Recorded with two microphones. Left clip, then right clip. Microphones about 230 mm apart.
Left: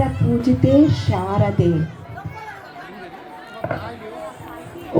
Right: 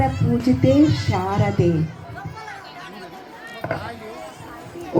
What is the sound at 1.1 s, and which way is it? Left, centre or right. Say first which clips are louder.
Music: left 1 dB; left.